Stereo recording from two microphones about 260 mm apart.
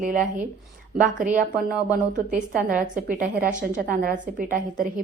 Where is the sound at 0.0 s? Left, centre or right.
Right.